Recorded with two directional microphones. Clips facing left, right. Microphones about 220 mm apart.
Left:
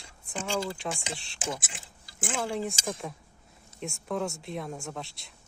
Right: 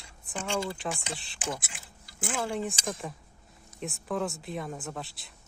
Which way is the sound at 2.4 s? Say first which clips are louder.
Even; centre (ahead or behind).